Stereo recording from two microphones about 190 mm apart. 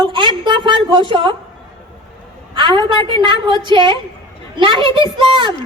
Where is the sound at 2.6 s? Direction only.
25° right (ahead or behind).